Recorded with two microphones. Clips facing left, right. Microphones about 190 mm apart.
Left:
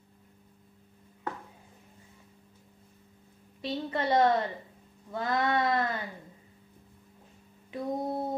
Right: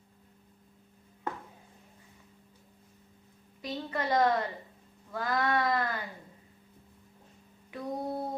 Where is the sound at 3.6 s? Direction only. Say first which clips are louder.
Left 3 dB; 25° left (ahead or behind).